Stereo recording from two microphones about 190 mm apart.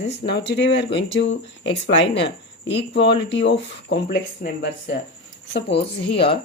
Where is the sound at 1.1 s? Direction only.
75° left (ahead or behind); by 4.9 s 60° left (ahead or behind).